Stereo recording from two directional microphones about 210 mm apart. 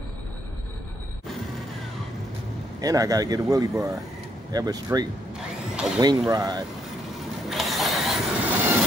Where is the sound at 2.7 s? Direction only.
15° right (ahead or behind).